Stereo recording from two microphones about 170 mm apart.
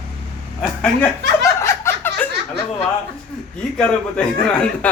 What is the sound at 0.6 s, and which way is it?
Speech, 10° left (ahead or behind).